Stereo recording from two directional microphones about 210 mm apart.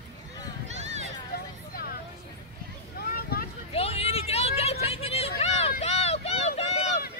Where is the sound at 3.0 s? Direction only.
45° left (ahead or behind).